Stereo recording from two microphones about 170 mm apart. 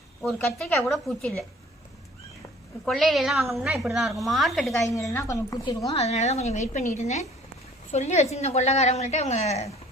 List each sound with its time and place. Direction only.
0.2 s a woman's voice: 5° left (ahead or behind)
2.8 s a woman's voice: centre (ahead or behind)
5.1 s a woman's voice: 20° left (ahead or behind)
6.0 s a woman's voice: 40° left (ahead or behind)